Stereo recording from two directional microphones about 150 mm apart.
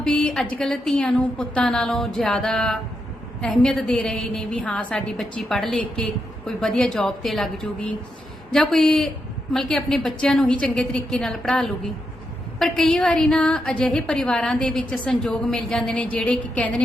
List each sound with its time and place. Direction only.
0.2 s a woman's voice: 5° left (ahead or behind)